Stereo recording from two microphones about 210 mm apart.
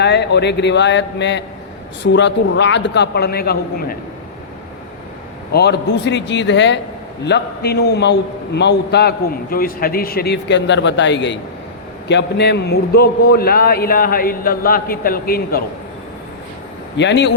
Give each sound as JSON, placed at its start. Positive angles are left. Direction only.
{"t": 0.0, "sound": "a man's voice", "side_deg": 55}
{"t": 5.5, "sound": "a man's voice", "side_deg": 50}
{"t": 17.0, "sound": "a man's voice", "side_deg": 55}